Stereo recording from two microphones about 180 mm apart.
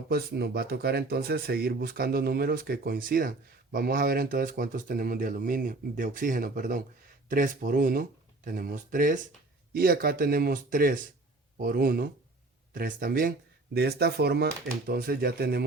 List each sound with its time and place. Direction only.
0.1 s speech: 60° right (ahead or behind)
13.7 s speech: 60° right (ahead or behind)